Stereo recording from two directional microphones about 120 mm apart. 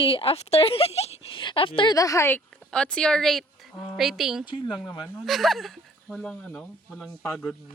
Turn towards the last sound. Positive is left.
turn(degrees=5)  # may be behind; listen again after turning